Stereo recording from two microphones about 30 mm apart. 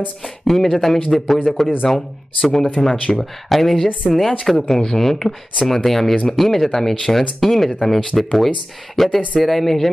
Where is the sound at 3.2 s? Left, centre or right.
Centre.